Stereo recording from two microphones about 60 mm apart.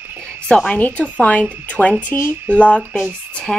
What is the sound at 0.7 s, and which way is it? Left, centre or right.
Speech, left.